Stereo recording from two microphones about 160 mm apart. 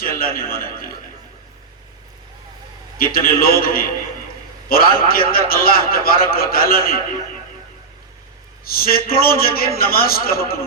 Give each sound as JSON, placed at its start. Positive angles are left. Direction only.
{"t": 0.0, "sound": "a man's voice", "side_deg": 65}
{"t": 3.0, "sound": "a man's voice", "side_deg": 65}
{"t": 8.6, "sound": "a man's voice", "side_deg": 70}